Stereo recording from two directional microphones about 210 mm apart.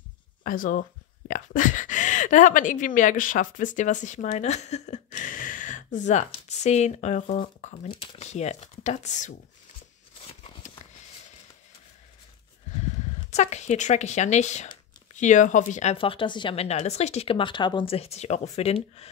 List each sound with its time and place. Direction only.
0.4 s speech: 40° left (ahead or behind)
13.3 s speech: 35° left (ahead or behind)